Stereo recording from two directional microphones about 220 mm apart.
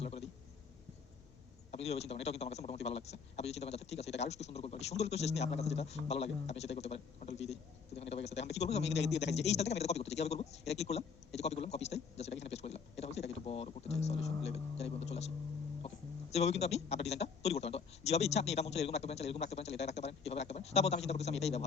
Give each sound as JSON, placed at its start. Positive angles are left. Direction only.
{"t": 0.0, "sound": "a sound", "side_deg": 25}
{"t": 1.7, "sound": "a man's voice", "side_deg": 30}
{"t": 16.3, "sound": "a man's voice", "side_deg": 30}